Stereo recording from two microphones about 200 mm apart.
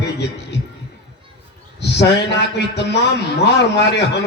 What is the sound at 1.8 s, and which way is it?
A man's voice, 55° left (ahead or behind).